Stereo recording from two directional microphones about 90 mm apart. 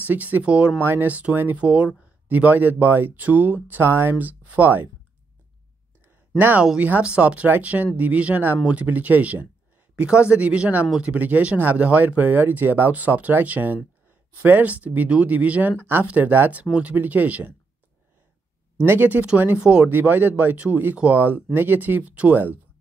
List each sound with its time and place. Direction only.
0.0 s speech: 20° right (ahead or behind)
6.3 s speech: 20° right (ahead or behind)
18.9 s speech: 20° right (ahead or behind)